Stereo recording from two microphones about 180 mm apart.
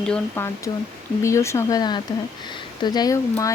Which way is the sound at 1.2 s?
15° left (ahead or behind).